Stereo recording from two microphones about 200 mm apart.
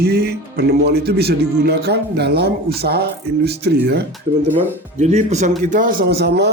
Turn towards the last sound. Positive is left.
turn(degrees=-55)  # may be behind; listen again after turning